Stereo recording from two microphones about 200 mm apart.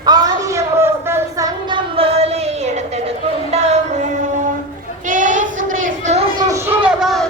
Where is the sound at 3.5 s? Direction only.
30° right (ahead or behind).